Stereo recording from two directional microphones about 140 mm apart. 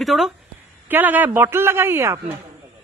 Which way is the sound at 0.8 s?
15° right (ahead or behind).